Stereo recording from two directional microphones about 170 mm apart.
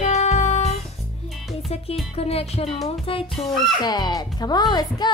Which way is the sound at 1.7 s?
35° left (ahead or behind).